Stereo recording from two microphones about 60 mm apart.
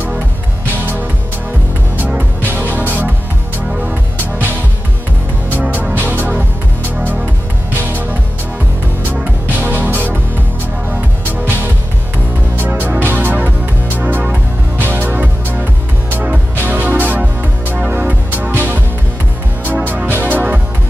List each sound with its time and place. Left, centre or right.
2.0 s music: right
5.5 s music: right
7.7 s music: right
19.9 s music: right